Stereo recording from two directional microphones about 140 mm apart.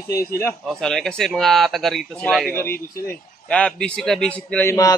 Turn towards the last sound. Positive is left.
turn(degrees=10)  # may be behind; listen again after turning